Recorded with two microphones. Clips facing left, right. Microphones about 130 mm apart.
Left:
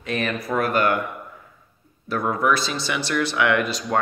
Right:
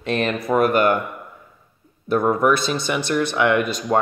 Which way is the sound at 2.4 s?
50° right (ahead or behind).